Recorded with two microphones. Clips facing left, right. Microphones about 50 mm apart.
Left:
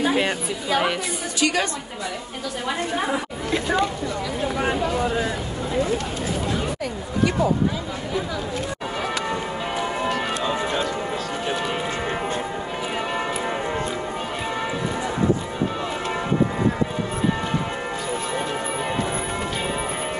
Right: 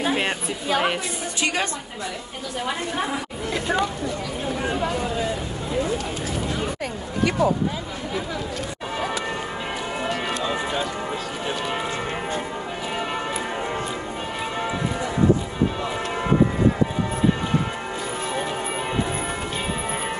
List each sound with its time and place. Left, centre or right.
1.4 s a woman's voice: right